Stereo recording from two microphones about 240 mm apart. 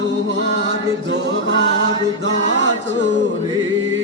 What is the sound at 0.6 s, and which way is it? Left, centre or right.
Chant, right.